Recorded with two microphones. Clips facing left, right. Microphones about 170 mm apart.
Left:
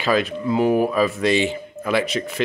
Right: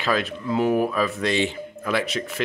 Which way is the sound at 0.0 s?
Centre (ahead or behind).